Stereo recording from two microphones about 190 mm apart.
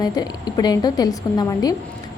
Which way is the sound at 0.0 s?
20° left (ahead or behind).